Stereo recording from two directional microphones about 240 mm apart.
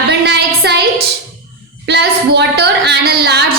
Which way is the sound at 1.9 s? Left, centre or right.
Right.